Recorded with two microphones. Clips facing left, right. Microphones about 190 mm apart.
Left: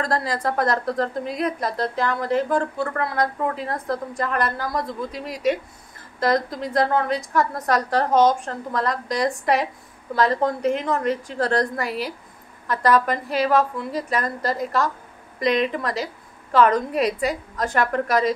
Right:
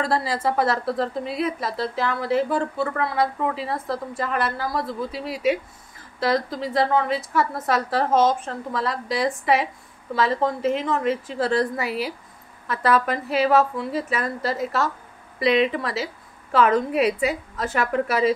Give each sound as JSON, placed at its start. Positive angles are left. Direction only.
{"t": 0.0, "sound": "a woman's voice", "side_deg": -5}
{"t": 5.1, "sound": "speech", "side_deg": 45}
{"t": 6.1, "sound": "a woman's voice", "side_deg": 0}